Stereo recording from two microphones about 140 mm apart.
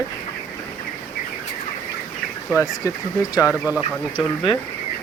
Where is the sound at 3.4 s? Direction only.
10° right (ahead or behind).